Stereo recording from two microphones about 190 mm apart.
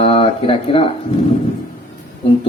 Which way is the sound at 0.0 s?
30° left (ahead or behind).